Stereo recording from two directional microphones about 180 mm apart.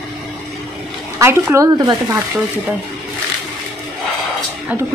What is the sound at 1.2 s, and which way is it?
Speech, 15° right (ahead or behind).